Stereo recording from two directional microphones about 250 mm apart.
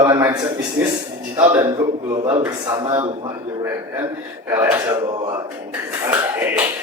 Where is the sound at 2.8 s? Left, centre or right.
Centre.